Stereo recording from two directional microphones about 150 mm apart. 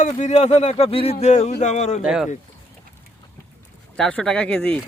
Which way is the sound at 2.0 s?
5° right (ahead or behind).